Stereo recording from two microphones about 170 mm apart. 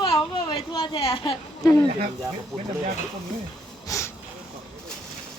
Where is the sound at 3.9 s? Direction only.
15° left (ahead or behind).